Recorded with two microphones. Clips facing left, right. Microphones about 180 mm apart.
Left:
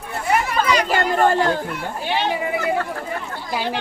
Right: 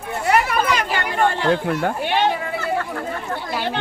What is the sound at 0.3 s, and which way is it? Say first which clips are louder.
Chatter: left 1 dB; 55° right (ahead or behind).